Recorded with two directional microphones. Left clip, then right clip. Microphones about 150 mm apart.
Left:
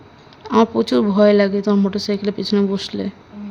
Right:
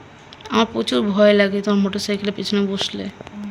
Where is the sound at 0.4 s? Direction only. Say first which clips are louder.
Left 3 dB; 35° left (ahead or behind).